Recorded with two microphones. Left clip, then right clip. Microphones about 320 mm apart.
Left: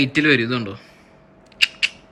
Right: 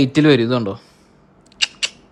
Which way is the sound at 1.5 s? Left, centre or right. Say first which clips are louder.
Left 2 dB; right.